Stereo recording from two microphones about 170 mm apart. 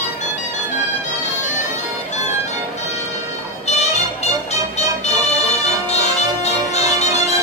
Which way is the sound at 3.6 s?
40° left (ahead or behind).